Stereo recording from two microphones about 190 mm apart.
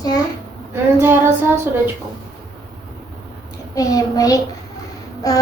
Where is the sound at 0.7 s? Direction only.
10° right (ahead or behind).